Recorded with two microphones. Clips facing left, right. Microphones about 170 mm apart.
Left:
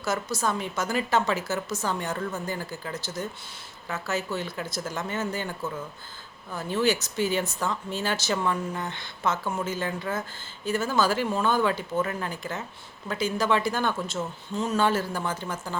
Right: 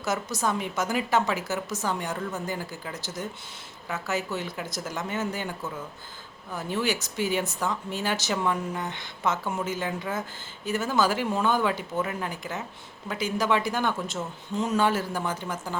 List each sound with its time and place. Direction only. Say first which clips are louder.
0.0 s speech: even; 20° right (ahead or behind)
6.5 s speech: left 3 dB; 15° right (ahead or behind)